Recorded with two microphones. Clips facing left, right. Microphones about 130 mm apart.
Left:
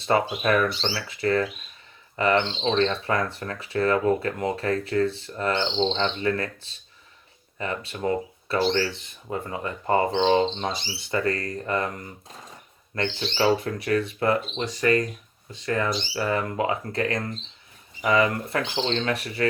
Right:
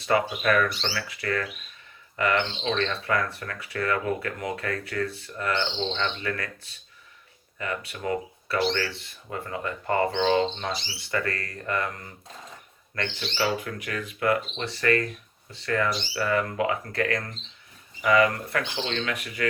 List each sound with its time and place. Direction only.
0.0 s speech: 25° left (ahead or behind)
14.6 s speech: 15° left (ahead or behind); by 19.5 s 35° left (ahead or behind)